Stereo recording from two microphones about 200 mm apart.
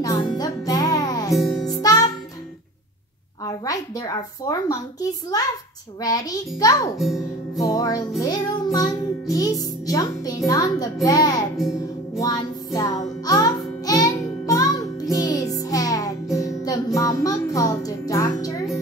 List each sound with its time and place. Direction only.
0.0 s music: 20° left (ahead or behind)
1.4 s music: centre (ahead or behind)
1.7 s music: 20° left (ahead or behind)
3.4 s a woman's voice: 20° left (ahead or behind)
6.0 s a child's voice: 20° left (ahead or behind)
7.0 s speech: centre (ahead or behind)
7.5 s music: 20° left (ahead or behind)
8.7 s a child's voice: 20° left (ahead or behind)
12.2 s music: 20° left (ahead or behind)